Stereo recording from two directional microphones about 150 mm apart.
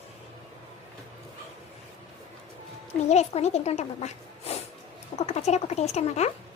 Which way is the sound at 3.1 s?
45° left (ahead or behind).